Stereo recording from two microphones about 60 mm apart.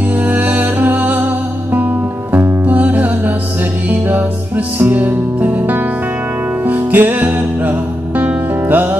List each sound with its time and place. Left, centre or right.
0.3 s music: right
2.7 s music: right
4.7 s music: right